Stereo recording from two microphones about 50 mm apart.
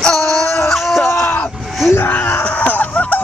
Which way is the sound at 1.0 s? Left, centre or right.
Left.